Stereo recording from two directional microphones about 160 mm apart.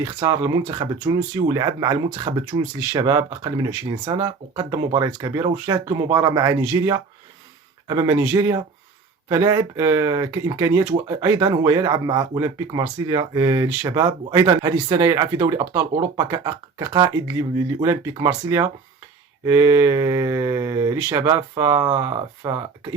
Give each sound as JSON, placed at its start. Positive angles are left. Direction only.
{"t": 0.0, "sound": "speech", "side_deg": -25}